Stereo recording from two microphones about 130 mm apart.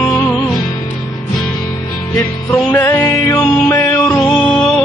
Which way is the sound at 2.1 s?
15° left (ahead or behind).